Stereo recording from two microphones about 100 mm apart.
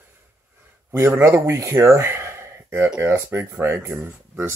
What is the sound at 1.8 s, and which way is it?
Gasp, 25° right (ahead or behind).